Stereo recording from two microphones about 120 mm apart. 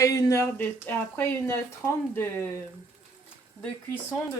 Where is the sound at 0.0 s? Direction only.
30° left (ahead or behind).